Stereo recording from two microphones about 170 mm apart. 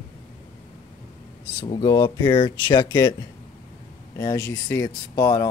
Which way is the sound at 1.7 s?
25° left (ahead or behind).